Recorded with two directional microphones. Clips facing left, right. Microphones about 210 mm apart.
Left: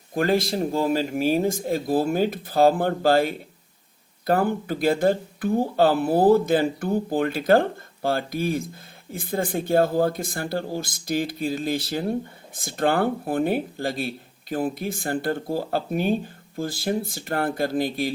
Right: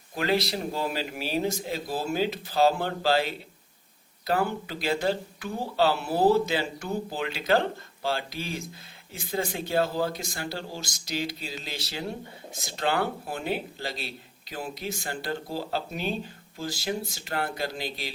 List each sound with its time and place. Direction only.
0.1 s speech: 50° left (ahead or behind)